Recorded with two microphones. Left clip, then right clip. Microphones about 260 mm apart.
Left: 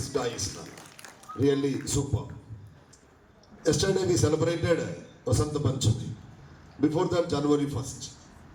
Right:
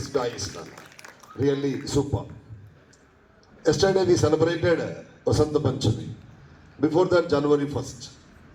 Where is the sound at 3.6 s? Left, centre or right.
Right.